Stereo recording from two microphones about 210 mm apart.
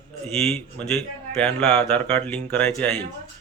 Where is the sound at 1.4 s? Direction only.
5° left (ahead or behind).